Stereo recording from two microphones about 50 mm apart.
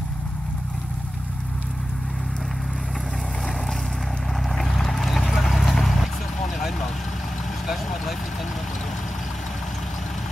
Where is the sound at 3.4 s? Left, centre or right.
Centre.